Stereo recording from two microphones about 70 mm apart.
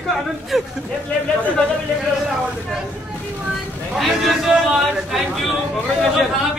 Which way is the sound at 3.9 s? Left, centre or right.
Centre.